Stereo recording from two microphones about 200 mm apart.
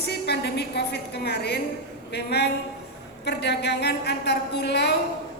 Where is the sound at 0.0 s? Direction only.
55° left (ahead or behind).